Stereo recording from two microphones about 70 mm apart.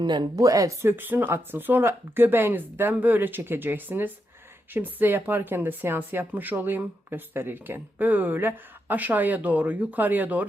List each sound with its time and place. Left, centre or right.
0.0 s speech: right
0.8 s speech: right